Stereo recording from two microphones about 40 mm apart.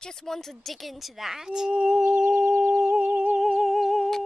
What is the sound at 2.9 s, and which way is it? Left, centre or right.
Humming, right.